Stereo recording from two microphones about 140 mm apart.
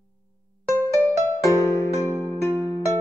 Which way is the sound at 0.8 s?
15° left (ahead or behind).